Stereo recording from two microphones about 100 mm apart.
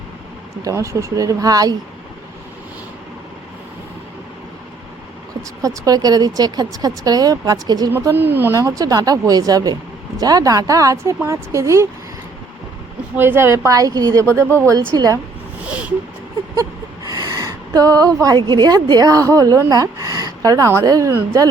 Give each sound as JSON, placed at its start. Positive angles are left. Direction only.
{"t": 0.6, "sound": "speech", "side_deg": -30}
{"t": 5.6, "sound": "speech", "side_deg": -40}
{"t": 8.1, "sound": "a woman's voice", "side_deg": -20}
{"t": 8.5, "sound": "speech", "side_deg": -35}
{"t": 13.1, "sound": "a woman's voice", "side_deg": -25}
{"t": 15.6, "sound": "a sound", "side_deg": -10}
{"t": 16.6, "sound": "a sound", "side_deg": -35}
{"t": 18.3, "sound": "speech", "side_deg": -50}